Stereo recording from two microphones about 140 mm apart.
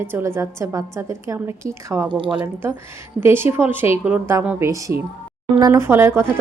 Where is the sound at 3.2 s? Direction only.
15° right (ahead or behind).